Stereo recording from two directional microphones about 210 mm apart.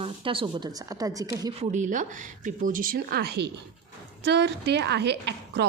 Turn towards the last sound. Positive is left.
turn(degrees=-55)  # may be behind; listen again after turning